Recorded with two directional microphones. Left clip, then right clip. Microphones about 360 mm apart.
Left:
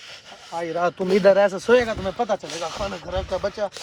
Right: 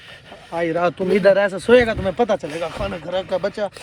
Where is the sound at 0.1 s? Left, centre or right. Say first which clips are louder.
Right 4 dB; centre.